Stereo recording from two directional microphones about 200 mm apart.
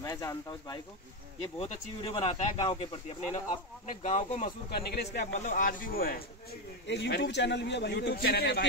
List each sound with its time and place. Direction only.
0.0 s speech: 15° left (ahead or behind)
1.6 s speech: 30° left (ahead or behind)
4.4 s speech: 50° left (ahead or behind)
5.0 s speech: 35° left (ahead or behind)
6.9 s a man's voice: 60° left (ahead or behind)